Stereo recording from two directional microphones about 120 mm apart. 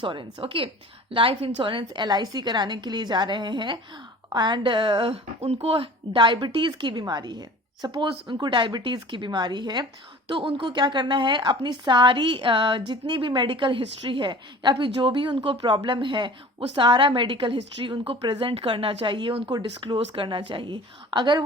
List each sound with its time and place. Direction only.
0.0 s a woman's voice: 40° right (ahead or behind)